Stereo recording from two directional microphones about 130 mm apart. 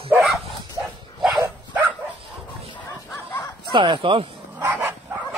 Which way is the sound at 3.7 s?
40° right (ahead or behind).